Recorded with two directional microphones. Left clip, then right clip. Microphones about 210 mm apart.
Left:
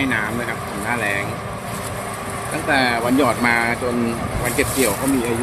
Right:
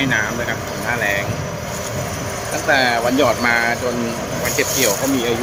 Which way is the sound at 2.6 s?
Centre (ahead or behind).